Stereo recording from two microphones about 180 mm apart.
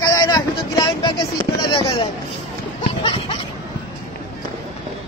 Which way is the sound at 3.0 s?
30° left (ahead or behind).